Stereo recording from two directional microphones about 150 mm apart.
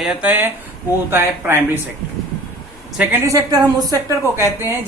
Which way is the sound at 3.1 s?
25° right (ahead or behind).